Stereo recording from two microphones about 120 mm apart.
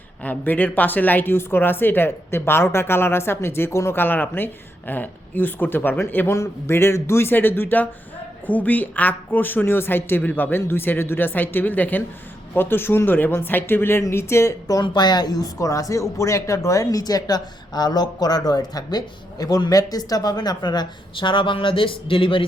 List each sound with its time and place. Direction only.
0.2 s speech: 15° left (ahead or behind); by 22.4 s 45° left (ahead or behind)